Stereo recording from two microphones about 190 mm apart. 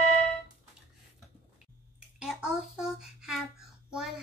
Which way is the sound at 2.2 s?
5° right (ahead or behind).